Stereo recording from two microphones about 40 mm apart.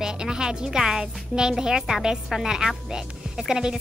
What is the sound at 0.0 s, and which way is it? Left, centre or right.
Speech, centre.